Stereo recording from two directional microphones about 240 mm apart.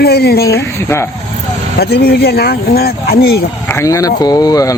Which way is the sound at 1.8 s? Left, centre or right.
Left.